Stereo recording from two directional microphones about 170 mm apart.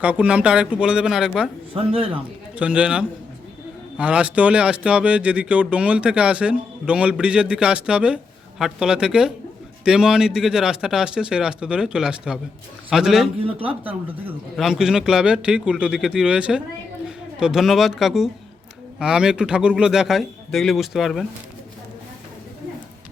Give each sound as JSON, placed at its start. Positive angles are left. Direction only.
{"t": 0.0, "sound": "speech", "side_deg": -10}
{"t": 1.7, "sound": "speech", "side_deg": -35}
{"t": 2.6, "sound": "speech", "side_deg": -5}